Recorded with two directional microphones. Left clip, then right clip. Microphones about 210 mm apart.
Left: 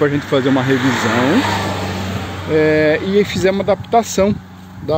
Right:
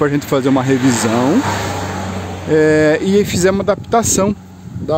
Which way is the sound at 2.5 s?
30° right (ahead or behind).